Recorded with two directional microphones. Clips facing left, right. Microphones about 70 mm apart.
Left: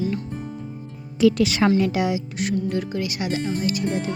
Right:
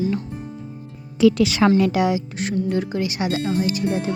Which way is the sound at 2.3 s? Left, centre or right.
Right.